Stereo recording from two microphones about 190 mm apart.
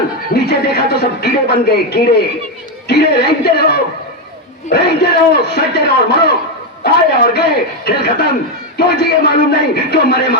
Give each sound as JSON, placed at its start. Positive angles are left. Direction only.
{"t": 0.3, "sound": "a man's voice", "side_deg": 60}